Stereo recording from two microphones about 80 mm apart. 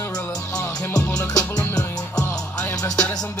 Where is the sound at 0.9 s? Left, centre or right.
Left.